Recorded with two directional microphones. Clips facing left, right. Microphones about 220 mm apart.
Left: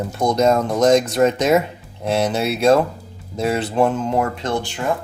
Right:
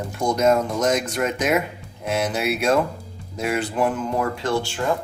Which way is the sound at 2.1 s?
30° left (ahead or behind).